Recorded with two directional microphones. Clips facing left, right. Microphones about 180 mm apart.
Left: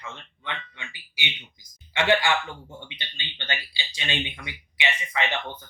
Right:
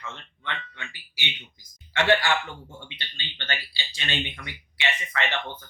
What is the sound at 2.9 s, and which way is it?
Speech, 15° left (ahead or behind).